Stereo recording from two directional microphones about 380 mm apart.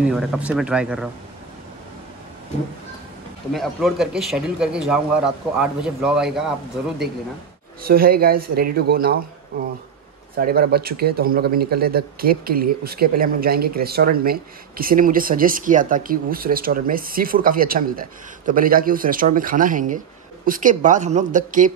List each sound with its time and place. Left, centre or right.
0.0 s speech: centre
3.5 s speech: centre
7.8 s a man's voice: right
10.3 s a man's voice: right